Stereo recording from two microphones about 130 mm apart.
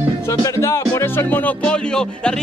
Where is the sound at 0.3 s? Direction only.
20° left (ahead or behind).